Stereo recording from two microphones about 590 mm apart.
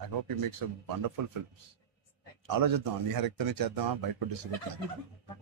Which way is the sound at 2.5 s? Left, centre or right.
Right.